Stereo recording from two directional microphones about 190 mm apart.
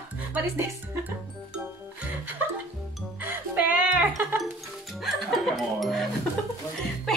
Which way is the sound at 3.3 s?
10° right (ahead or behind).